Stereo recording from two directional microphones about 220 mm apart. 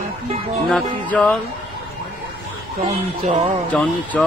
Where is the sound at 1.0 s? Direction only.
5° left (ahead or behind).